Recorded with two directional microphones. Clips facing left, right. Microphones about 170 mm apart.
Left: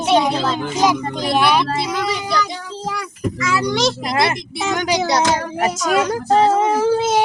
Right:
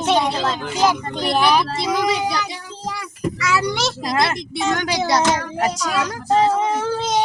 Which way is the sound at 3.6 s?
5° right (ahead or behind).